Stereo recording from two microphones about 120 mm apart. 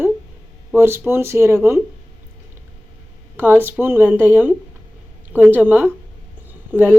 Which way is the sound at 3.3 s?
15° right (ahead or behind).